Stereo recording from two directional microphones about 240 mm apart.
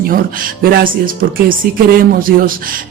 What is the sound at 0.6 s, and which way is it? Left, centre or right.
Speech, right.